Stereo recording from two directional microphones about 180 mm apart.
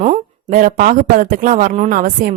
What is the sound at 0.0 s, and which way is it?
Speech, 40° right (ahead or behind).